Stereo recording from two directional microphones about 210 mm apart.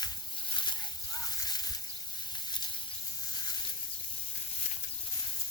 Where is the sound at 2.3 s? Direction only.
20° left (ahead or behind).